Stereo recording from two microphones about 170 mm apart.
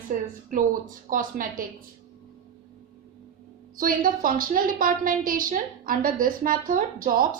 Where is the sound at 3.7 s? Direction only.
55° right (ahead or behind).